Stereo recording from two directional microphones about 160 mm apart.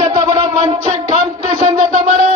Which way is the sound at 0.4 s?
35° right (ahead or behind).